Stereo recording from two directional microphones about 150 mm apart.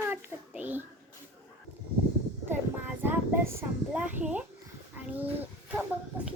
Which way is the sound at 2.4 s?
15° right (ahead or behind).